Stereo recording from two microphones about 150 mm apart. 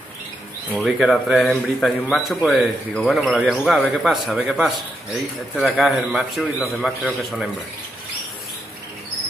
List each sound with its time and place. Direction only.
0.8 s speech: centre (ahead or behind)